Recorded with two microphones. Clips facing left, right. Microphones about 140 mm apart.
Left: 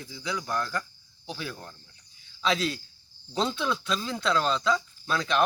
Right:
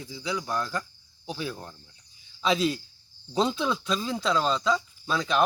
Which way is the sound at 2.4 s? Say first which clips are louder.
Right 3 dB; 5° right (ahead or behind).